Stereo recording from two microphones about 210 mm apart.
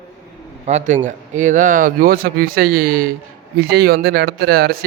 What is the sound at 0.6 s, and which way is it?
Speech, 35° right (ahead or behind).